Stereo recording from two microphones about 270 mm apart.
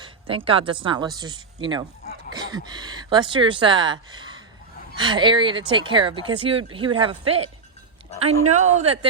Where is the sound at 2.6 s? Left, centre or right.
Centre.